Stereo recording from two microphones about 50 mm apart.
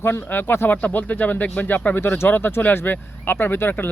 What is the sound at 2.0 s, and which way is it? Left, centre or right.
Speech, left.